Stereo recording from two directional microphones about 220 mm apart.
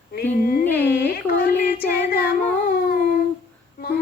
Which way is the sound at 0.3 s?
40° left (ahead or behind).